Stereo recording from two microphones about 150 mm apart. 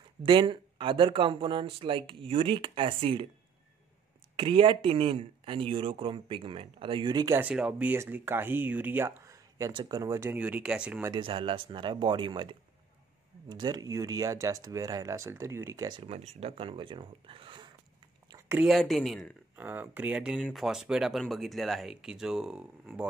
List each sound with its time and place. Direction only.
0.2 s speech: 30° right (ahead or behind)
4.4 s speech: 35° right (ahead or behind)
7.3 s speech: 10° right (ahead or behind)
11.1 s speech: 35° right (ahead or behind)
16.0 s speech: 45° right (ahead or behind)
18.5 s speech: 5° right (ahead or behind)
19.5 s speech: 10° right (ahead or behind)